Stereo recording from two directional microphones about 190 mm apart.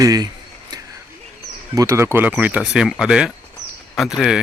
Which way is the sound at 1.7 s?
15° right (ahead or behind).